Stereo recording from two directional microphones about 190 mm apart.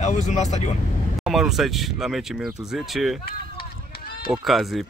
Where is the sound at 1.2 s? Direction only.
Centre (ahead or behind).